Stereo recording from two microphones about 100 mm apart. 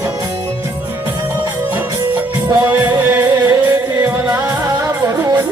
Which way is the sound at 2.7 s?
20° right (ahead or behind).